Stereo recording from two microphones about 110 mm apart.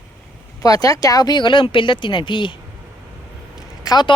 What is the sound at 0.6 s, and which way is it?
Speech, 35° left (ahead or behind).